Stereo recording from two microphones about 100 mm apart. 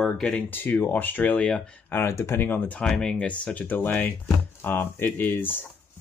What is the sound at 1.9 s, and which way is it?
Speech, 25° left (ahead or behind).